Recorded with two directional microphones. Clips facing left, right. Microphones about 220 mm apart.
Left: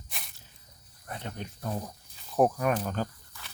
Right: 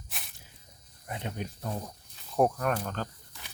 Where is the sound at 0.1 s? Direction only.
Centre (ahead or behind).